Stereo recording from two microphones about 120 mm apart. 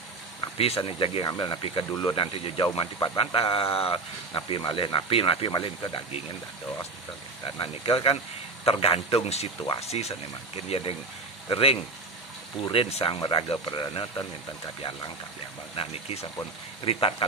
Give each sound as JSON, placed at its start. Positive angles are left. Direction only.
{"t": 0.8, "sound": "speech", "side_deg": 50}
{"t": 2.3, "sound": "speech", "side_deg": 55}
{"t": 2.6, "sound": "speech", "side_deg": 40}
{"t": 7.5, "sound": "speech", "side_deg": 50}
{"t": 13.2, "sound": "speech", "side_deg": 40}
{"t": 15.7, "sound": "speech", "side_deg": 55}